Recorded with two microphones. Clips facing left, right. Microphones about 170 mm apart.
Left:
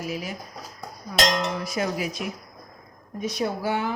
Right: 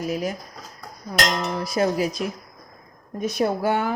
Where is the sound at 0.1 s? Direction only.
45° right (ahead or behind).